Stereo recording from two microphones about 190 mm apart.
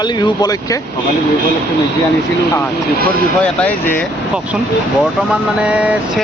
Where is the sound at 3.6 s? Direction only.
10° left (ahead or behind).